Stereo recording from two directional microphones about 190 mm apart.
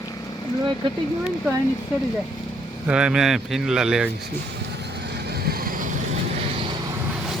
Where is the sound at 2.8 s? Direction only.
5° right (ahead or behind).